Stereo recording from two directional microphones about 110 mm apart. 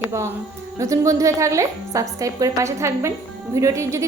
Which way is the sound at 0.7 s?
30° right (ahead or behind).